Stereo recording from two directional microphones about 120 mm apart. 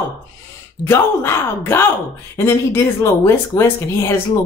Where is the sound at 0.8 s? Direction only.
20° left (ahead or behind).